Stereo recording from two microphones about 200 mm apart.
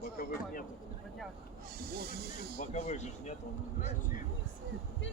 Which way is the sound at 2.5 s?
35° left (ahead or behind).